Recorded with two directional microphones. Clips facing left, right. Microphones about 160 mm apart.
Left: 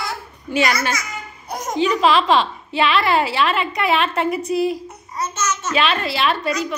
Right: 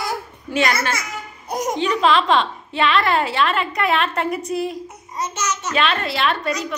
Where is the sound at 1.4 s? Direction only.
15° right (ahead or behind).